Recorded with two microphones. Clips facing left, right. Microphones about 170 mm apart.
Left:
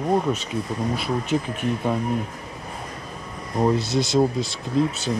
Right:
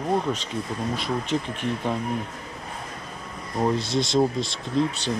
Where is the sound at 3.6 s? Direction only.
5° left (ahead or behind).